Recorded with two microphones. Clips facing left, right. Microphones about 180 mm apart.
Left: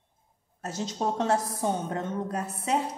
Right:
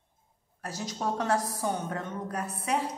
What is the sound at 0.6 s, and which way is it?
A woman's voice, 25° left (ahead or behind).